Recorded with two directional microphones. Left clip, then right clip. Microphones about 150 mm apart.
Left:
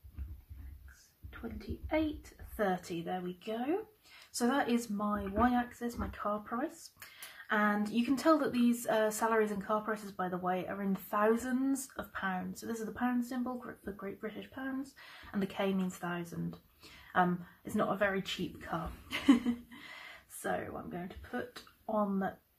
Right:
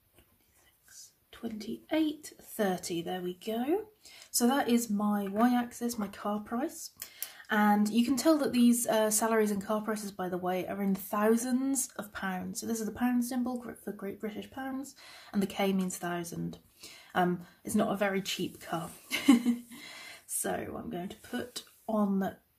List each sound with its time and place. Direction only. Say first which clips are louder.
2.7 s a woman's voice: right 2 dB; 30° right (ahead or behind)
20.4 s speech: right 1 dB; 45° right (ahead or behind)